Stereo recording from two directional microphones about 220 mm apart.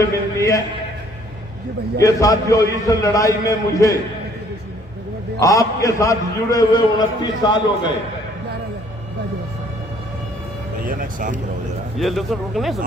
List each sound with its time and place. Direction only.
0.0 s a man's voice: 15° left (ahead or behind)
2.0 s a man's voice: 15° left (ahead or behind)
5.4 s a man's voice: 15° left (ahead or behind)
10.8 s speech: 40° right (ahead or behind)
11.9 s speech: centre (ahead or behind)